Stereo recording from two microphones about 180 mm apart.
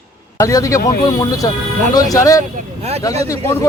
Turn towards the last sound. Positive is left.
turn(degrees=15)  # may be behind; listen again after turning